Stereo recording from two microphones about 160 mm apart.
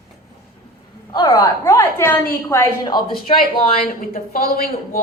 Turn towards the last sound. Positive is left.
turn(degrees=60)  # may be behind; listen again after turning